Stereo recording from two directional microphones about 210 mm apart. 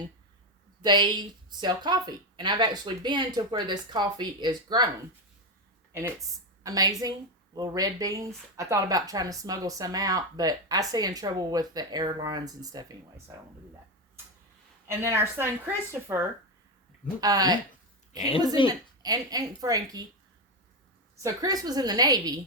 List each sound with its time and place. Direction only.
0.8 s a woman's voice: 20° right (ahead or behind)
5.9 s a woman's voice: 15° right (ahead or behind)
14.8 s speech: 10° right (ahead or behind)
18.6 s a woman's voice: 25° left (ahead or behind)
19.0 s speech: 20° right (ahead or behind)
21.2 s speech: 15° right (ahead or behind)